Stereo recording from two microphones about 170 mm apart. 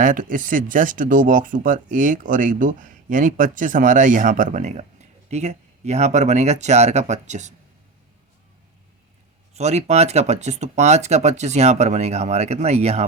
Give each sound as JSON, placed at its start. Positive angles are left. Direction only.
{"t": 0.0, "sound": "speech", "side_deg": -50}
{"t": 9.6, "sound": "speech", "side_deg": -40}